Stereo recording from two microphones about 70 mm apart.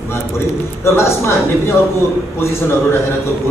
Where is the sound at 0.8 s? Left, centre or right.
Left.